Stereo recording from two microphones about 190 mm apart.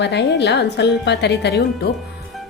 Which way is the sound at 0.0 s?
65° left (ahead or behind).